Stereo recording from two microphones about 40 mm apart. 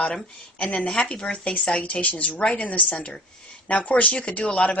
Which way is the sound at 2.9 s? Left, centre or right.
Left.